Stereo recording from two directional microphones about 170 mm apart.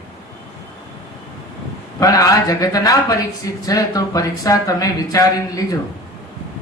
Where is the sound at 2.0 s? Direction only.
20° left (ahead or behind).